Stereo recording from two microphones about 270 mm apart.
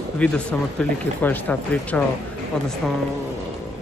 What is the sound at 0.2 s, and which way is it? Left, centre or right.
Speech, centre.